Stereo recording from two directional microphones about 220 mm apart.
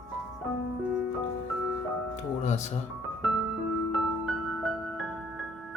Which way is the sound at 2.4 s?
30° left (ahead or behind).